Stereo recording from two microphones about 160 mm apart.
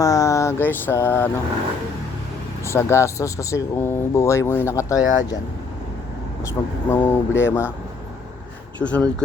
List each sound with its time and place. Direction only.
0.0 s a sound: 20° left (ahead or behind)
2.6 s speech: 15° left (ahead or behind)
6.5 s speech: 15° left (ahead or behind)
8.8 s speech: 5° left (ahead or behind)